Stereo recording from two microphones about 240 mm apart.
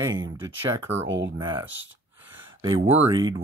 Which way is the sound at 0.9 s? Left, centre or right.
Right.